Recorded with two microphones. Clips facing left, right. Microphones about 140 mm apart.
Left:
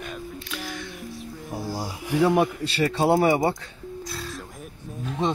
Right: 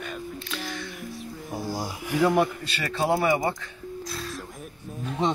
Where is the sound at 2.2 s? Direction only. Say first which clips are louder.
Left 1 dB; 15° left (ahead or behind).